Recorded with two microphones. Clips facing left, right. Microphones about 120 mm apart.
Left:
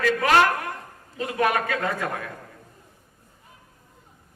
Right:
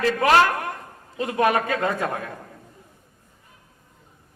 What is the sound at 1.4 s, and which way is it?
Speech, 25° right (ahead or behind).